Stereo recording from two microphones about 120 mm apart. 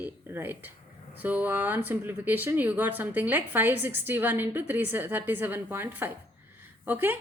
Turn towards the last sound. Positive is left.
turn(degrees=-15)  # may be behind; listen again after turning